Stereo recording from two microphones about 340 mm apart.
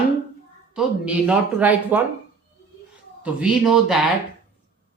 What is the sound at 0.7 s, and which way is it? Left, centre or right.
Speech, centre.